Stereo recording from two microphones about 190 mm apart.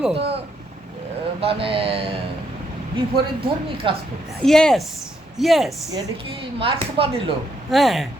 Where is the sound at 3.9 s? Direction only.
25° right (ahead or behind).